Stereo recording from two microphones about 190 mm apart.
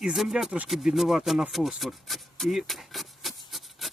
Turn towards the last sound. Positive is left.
turn(degrees=0)  # may be behind; listen again after turning